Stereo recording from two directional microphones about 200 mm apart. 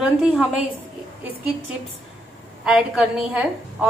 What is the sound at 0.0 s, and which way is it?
Speech, 5° right (ahead or behind).